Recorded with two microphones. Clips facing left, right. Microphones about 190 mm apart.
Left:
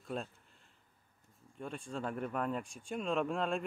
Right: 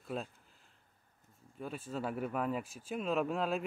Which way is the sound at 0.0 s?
Centre (ahead or behind).